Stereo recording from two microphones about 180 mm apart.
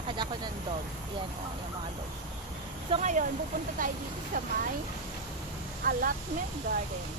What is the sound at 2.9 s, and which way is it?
Speech, 40° right (ahead or behind).